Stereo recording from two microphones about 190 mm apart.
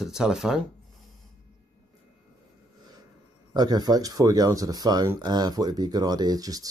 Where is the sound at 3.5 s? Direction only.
20° right (ahead or behind).